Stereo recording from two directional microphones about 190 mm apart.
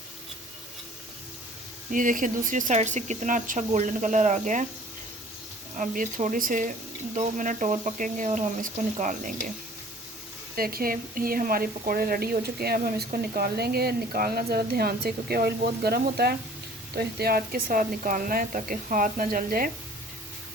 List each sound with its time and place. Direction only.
1.9 s speech: 45° right (ahead or behind)
5.7 s speech: 45° right (ahead or behind)
10.5 s speech: 50° right (ahead or behind)